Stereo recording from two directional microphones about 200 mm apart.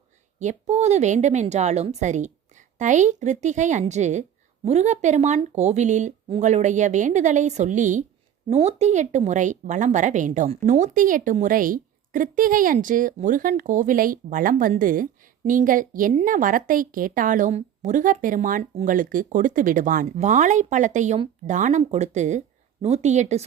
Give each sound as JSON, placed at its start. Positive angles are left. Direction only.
{"t": 0.3, "sound": "a woman's voice", "side_deg": -35}